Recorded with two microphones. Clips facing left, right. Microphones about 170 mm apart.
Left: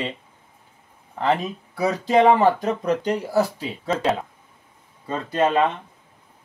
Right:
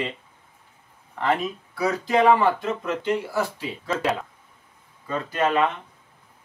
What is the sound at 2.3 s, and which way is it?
Speech, 40° left (ahead or behind).